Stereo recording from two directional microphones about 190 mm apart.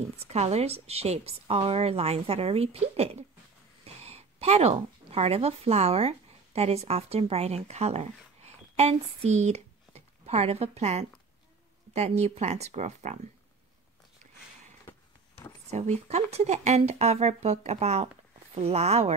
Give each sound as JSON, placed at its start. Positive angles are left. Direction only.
{"t": 0.2, "sound": "speech", "side_deg": -35}
{"t": 15.7, "sound": "speech", "side_deg": -35}